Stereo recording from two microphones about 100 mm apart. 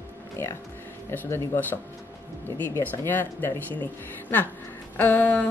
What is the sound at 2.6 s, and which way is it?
Speech, 20° left (ahead or behind).